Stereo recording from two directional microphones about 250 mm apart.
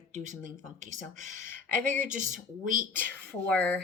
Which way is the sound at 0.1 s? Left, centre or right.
Right.